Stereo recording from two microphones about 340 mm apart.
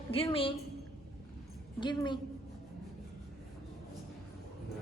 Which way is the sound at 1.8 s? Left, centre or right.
Centre.